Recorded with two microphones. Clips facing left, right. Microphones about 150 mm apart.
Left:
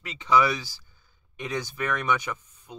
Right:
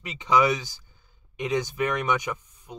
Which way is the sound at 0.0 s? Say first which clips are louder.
Right 1 dB; 15° right (ahead or behind).